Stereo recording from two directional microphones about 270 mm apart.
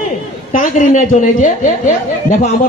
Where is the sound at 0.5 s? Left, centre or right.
Left.